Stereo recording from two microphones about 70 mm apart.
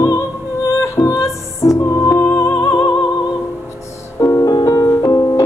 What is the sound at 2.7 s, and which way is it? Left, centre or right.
Music, left.